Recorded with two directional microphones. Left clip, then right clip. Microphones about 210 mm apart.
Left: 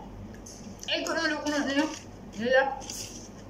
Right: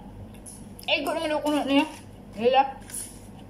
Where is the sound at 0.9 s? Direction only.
20° right (ahead or behind).